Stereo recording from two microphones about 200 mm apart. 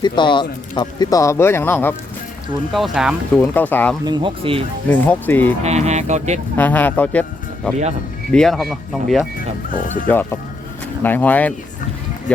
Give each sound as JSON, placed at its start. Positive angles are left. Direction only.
{"t": 0.0, "sound": "speech", "side_deg": 25}
{"t": 2.7, "sound": "speech", "side_deg": 0}
{"t": 4.0, "sound": "speech", "side_deg": -25}
{"t": 4.9, "sound": "speech", "side_deg": 10}
{"t": 5.6, "sound": "speech", "side_deg": -35}
{"t": 6.6, "sound": "speech", "side_deg": 10}
{"t": 9.7, "sound": "speech", "side_deg": 45}
{"t": 11.0, "sound": "speech", "side_deg": 10}